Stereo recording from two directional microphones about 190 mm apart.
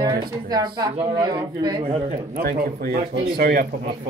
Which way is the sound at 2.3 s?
55° right (ahead or behind).